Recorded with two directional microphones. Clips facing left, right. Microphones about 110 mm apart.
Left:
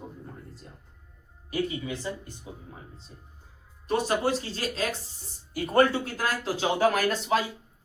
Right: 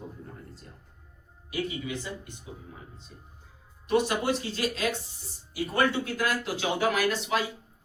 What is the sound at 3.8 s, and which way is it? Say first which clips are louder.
Speech: even; 35° left (ahead or behind).